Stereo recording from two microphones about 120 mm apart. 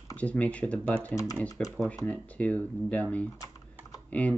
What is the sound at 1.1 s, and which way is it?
Speech, 30° left (ahead or behind).